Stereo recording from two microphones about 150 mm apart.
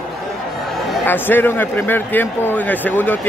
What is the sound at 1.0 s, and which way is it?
Speech, 15° left (ahead or behind).